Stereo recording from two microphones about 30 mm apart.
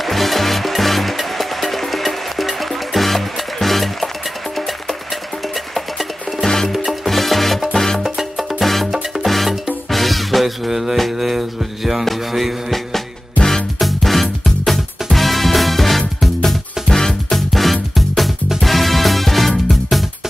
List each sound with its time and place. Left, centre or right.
0.0 s music: centre
6.4 s music: centre
7.1 s music: centre
7.7 s music: centre
8.0 s music: centre
13.7 s music: centre
16.4 s music: centre
17.5 s music: centre